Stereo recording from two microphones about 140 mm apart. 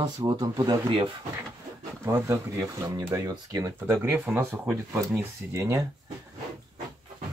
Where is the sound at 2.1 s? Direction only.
20° right (ahead or behind).